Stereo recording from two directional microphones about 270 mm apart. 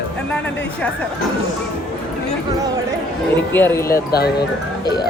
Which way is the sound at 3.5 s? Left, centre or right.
Centre.